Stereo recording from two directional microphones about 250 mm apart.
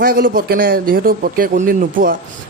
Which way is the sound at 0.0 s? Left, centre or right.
Right.